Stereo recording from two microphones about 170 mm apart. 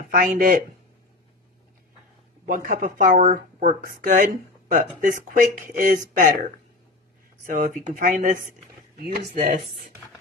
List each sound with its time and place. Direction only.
0.1 s speech: 55° right (ahead or behind)
2.4 s speech: 55° right (ahead or behind)
8.9 s speech: 70° right (ahead or behind)